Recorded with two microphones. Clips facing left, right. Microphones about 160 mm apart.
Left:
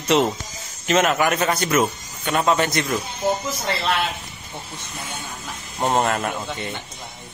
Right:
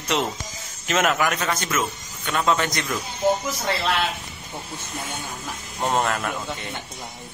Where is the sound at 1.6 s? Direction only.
40° left (ahead or behind).